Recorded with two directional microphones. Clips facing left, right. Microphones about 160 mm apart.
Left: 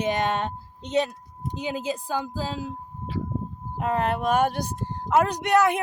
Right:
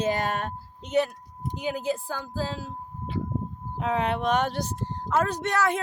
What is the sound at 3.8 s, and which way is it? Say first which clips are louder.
Speech: left 1 dB; centre (ahead or behind).